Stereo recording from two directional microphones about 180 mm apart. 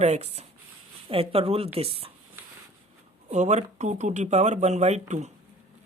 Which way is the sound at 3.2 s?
40° right (ahead or behind).